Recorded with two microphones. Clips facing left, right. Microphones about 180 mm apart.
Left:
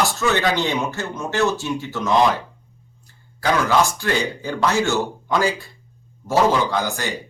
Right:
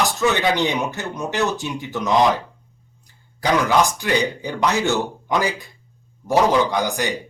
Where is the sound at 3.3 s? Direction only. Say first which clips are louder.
Right 1 dB; 15° right (ahead or behind).